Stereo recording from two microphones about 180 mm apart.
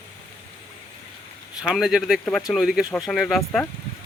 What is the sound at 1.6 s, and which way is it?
A man's voice, 5° right (ahead or behind).